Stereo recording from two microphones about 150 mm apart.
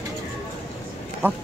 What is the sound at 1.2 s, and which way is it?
Speech, 15° right (ahead or behind).